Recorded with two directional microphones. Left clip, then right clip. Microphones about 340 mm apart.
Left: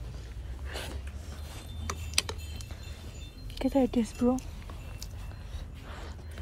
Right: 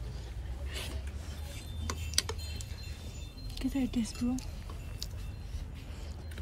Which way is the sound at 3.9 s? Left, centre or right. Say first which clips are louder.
Left 7 dB; centre.